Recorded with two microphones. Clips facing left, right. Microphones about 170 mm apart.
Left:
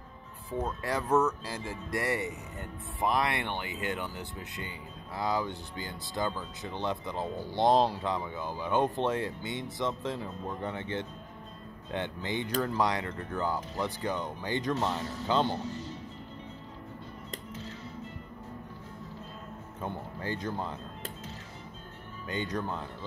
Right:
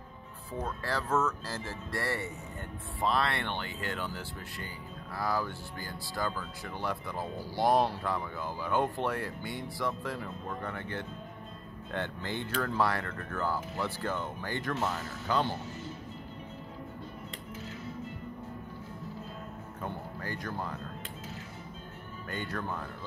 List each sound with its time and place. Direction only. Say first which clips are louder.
0.5 s speech: left 3 dB; 20° left (ahead or behind)
19.8 s a sound: left 2 dB; 20° left (ahead or behind)
22.3 s speech: left 3 dB; 20° left (ahead or behind)